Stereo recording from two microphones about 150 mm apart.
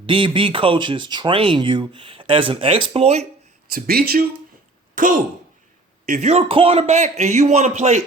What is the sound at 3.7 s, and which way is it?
Speech, 90° right.